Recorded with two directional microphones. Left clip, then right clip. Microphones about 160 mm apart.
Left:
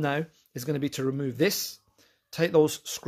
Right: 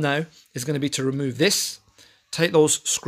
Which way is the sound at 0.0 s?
Centre (ahead or behind).